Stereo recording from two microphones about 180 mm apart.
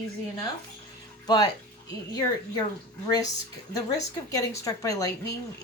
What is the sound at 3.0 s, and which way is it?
Speech, 20° left (ahead or behind).